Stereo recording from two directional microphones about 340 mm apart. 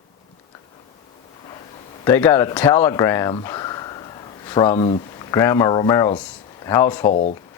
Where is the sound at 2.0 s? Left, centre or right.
Centre.